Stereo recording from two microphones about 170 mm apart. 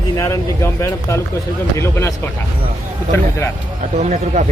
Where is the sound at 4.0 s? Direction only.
45° right (ahead or behind).